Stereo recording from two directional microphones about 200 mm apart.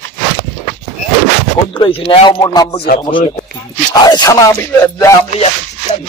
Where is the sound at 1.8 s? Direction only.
25° left (ahead or behind).